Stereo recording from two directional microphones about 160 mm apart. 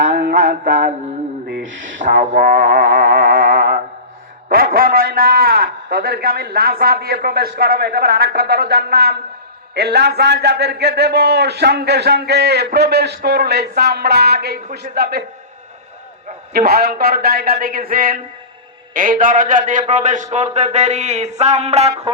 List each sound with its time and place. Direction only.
0.0 s mantra: 50° right (ahead or behind)
2.0 s music: 55° right (ahead or behind)
4.4 s a man's voice: 65° right (ahead or behind)
9.7 s a man's voice: 90° right
16.5 s a man's voice: 75° right (ahead or behind); by 22.1 s 45° right (ahead or behind)